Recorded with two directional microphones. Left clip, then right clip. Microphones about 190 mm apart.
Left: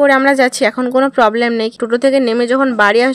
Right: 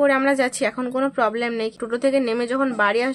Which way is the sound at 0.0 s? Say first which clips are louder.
Left 8 dB; 40° left (ahead or behind).